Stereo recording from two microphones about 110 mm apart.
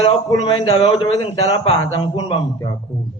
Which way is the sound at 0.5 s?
55° left (ahead or behind).